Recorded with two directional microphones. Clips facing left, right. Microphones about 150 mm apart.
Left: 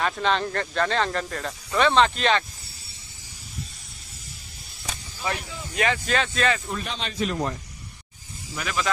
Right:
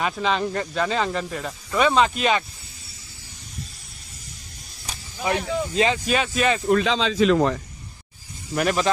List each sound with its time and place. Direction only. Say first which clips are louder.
0.0 s speech: right 1 dB; 5° right (ahead or behind)
5.3 s speech: right 13 dB; 65° right (ahead or behind)
5.8 s speech: right 1 dB; 20° right (ahead or behind)
6.7 s speech: right 12 dB; 90° right
8.5 s speech: right 8 dB; 45° right (ahead or behind)